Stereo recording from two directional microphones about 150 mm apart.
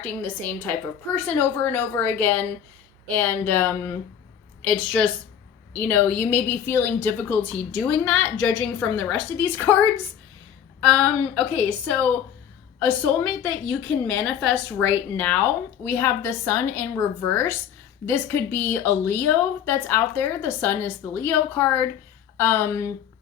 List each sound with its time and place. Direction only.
0.0 s a woman's voice: 10° left (ahead or behind)
10.8 s a woman's voice: 5° left (ahead or behind)